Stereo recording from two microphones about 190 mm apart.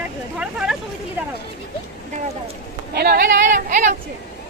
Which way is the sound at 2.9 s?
55° right (ahead or behind).